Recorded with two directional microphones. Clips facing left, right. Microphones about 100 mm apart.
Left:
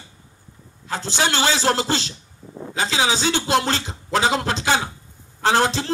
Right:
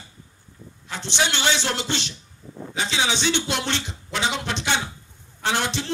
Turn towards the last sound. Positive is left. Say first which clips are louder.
# left 6 dB
turn(degrees=35)  # may be behind; listen again after turning